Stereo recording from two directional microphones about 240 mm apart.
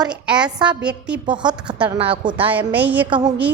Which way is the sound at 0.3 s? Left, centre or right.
Centre.